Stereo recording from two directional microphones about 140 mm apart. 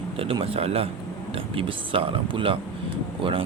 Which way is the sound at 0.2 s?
40° right (ahead or behind).